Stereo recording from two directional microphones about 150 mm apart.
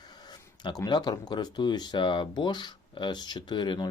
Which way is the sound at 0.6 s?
30° left (ahead or behind).